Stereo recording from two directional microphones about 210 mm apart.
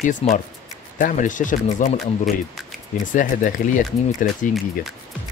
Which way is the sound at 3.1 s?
40° left (ahead or behind).